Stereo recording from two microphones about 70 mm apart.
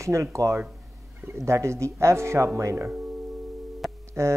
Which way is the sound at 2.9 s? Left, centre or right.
Centre.